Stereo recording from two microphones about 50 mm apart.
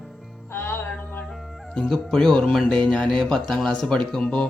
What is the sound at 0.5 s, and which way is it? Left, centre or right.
Music, left.